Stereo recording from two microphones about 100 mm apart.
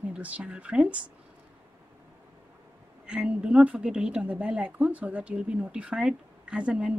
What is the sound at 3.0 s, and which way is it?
A woman's voice, 10° right (ahead or behind).